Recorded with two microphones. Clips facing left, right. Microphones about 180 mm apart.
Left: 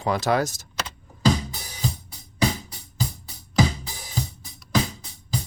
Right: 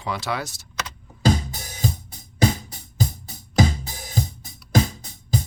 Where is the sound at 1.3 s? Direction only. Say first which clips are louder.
Right 1 dB; 45° right (ahead or behind).